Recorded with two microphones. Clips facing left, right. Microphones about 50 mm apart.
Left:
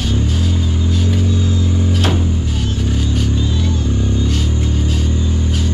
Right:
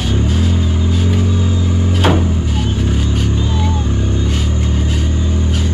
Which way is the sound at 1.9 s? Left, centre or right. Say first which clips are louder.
Right 6 dB; right.